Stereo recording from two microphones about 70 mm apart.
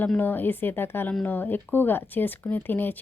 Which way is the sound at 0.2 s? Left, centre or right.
Left.